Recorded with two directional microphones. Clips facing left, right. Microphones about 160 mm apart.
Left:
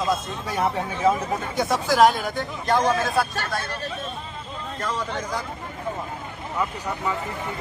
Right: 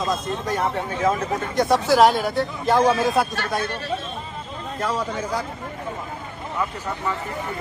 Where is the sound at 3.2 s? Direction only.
20° right (ahead or behind).